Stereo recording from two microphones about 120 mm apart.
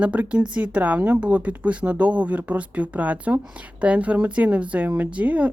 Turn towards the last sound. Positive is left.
turn(degrees=-10)  # may be behind; listen again after turning